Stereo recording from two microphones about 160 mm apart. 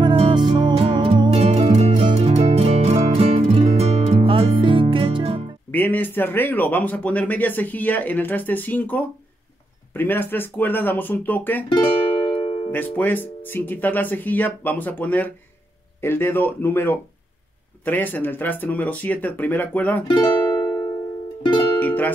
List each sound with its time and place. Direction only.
0.0 s music: 30° right (ahead or behind)
5.7 s speech: 10° left (ahead or behind)
12.3 s music: 30° left (ahead or behind)
12.7 s speech: 10° left (ahead or behind)
20.2 s music: 20° left (ahead or behind)
21.7 s music: 10° left (ahead or behind)